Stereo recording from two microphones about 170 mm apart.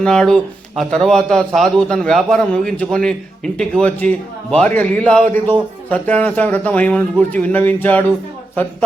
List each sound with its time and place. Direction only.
0.0 s a man's voice: 5° left (ahead or behind)